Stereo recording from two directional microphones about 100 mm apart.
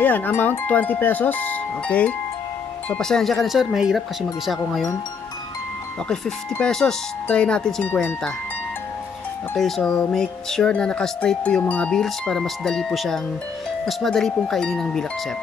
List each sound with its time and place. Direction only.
0.0 s wind chime: 20° left (ahead or behind)
2.9 s speech: 5° left (ahead or behind)
6.6 s speech: 5° left (ahead or behind)
9.6 s speech: 5° left (ahead or behind)